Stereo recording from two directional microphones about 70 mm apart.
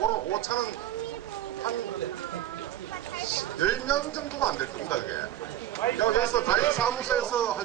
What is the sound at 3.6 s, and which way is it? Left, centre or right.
Speech, left.